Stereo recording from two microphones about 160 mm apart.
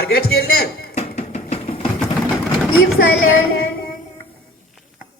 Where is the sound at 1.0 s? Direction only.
40° left (ahead or behind).